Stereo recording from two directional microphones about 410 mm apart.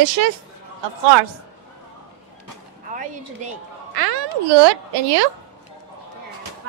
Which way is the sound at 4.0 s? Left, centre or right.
Right.